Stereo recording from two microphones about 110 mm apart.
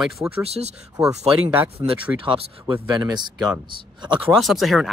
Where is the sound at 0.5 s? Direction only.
75° right (ahead or behind).